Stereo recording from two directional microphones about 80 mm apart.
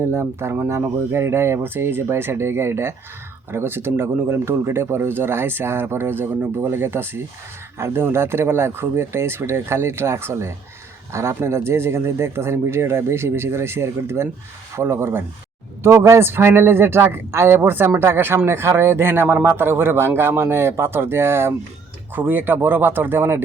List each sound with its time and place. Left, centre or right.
0.0 s speech: right